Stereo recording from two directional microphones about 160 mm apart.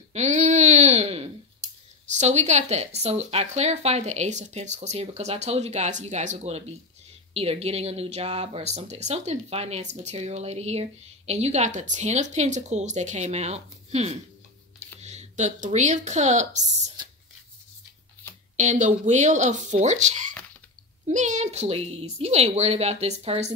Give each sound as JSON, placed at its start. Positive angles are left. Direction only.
{"t": 0.1, "sound": "a sound", "side_deg": -45}
{"t": 2.1, "sound": "speech", "side_deg": -45}
{"t": 18.6, "sound": "a woman's voice", "side_deg": -50}